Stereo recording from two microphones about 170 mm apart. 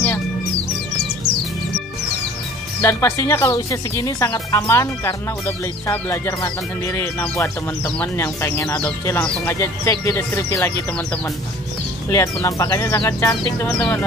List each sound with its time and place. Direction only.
2.8 s speech: 15° left (ahead or behind)
12.1 s speech: 20° left (ahead or behind)